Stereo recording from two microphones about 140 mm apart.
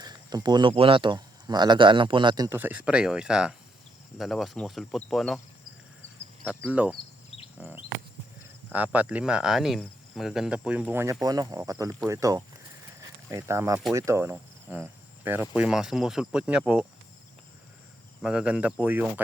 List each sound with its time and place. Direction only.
0.0 s a sound: 30° right (ahead or behind)
0.7 s speech: 40° right (ahead or behind)
2.6 s speech: 10° right (ahead or behind)
6.6 s cricket: 10° right (ahead or behind)
8.7 s cricket: 10° right (ahead or behind)
11.0 s speech: 25° right (ahead or behind); by 16.8 s 5° right (ahead or behind)
18.2 s cricket: 5° right (ahead or behind)